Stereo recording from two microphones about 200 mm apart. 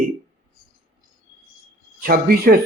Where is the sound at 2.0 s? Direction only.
50° right (ahead or behind).